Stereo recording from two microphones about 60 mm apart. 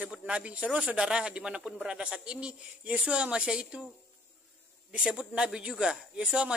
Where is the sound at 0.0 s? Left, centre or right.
Right.